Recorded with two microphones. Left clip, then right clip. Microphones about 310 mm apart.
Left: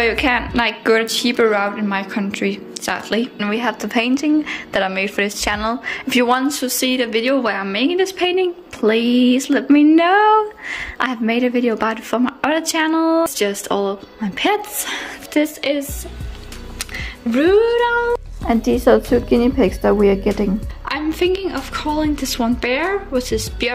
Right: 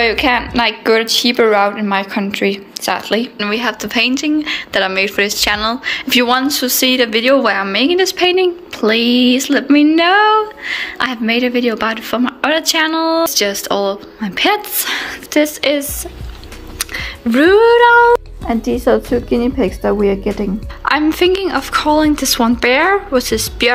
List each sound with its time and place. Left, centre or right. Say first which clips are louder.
0.0 s a woman's voice: right 3 dB; centre